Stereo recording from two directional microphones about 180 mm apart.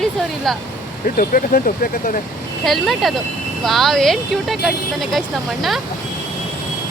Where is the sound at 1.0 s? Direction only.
50° left (ahead or behind).